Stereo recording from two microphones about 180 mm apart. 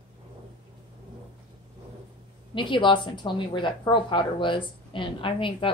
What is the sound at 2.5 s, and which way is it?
A woman's voice, 25° left (ahead or behind).